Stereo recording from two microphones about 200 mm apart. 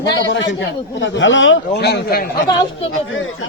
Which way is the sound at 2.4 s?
25° left (ahead or behind).